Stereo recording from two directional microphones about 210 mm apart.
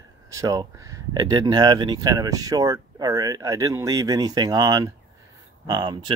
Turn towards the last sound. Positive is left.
turn(degrees=-20)  # may be behind; listen again after turning